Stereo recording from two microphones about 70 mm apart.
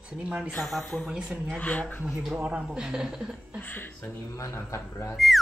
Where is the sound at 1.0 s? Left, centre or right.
Centre.